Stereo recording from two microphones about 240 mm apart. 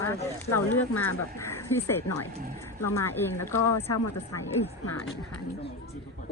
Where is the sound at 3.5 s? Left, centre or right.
Left.